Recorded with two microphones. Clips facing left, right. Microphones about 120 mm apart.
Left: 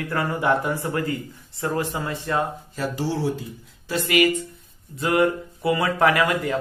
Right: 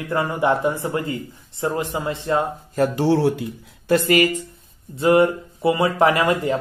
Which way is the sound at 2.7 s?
55° right (ahead or behind).